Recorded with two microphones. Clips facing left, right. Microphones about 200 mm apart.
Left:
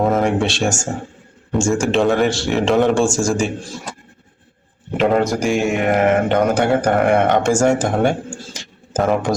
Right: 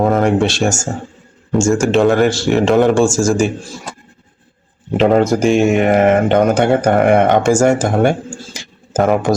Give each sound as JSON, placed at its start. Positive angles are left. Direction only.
{"t": 0.0, "sound": "speech", "side_deg": 0}
{"t": 4.9, "sound": "speech", "side_deg": -25}
{"t": 7.4, "sound": "speech", "side_deg": -10}
{"t": 8.5, "sound": "a sound", "side_deg": -5}